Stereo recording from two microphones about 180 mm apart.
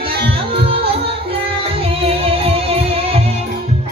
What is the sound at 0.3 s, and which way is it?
Music, 30° right (ahead or behind).